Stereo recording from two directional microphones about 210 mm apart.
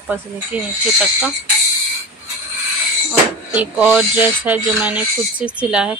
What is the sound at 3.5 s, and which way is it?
Speech, 5° right (ahead or behind).